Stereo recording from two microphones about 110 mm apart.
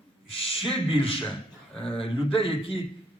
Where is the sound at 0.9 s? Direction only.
60° left (ahead or behind).